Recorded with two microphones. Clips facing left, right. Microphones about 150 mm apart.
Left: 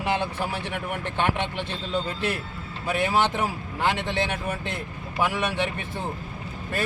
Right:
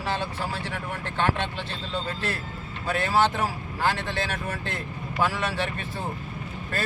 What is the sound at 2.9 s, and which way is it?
Speech, 15° left (ahead or behind).